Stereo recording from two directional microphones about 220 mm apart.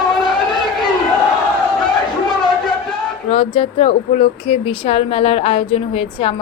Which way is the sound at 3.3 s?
25° left (ahead or behind).